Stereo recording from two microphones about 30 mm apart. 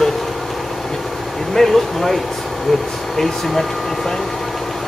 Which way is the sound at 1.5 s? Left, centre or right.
Centre.